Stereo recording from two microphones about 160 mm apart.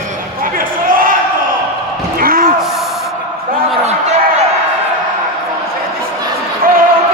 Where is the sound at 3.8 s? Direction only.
45° right (ahead or behind).